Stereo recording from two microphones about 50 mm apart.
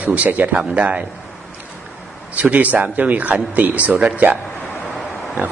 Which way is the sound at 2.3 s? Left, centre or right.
Right.